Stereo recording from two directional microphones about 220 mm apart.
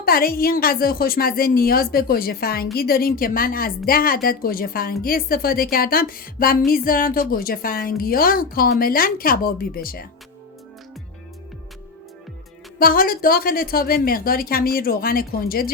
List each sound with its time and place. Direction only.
0.0 s a woman's voice: 40° left (ahead or behind)
12.8 s a woman's voice: 40° left (ahead or behind)